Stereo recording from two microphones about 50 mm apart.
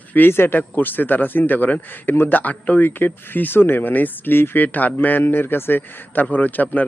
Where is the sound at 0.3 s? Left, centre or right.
Left.